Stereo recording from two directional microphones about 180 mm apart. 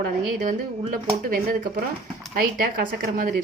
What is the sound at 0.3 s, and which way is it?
A woman's voice, 50° right (ahead or behind).